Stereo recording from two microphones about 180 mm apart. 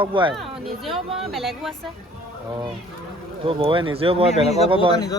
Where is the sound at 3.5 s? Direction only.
30° right (ahead or behind).